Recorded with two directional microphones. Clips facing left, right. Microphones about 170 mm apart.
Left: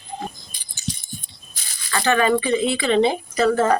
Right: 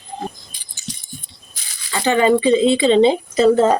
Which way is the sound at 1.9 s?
20° right (ahead or behind).